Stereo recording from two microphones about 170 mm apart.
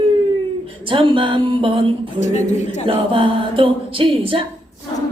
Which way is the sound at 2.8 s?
30° right (ahead or behind).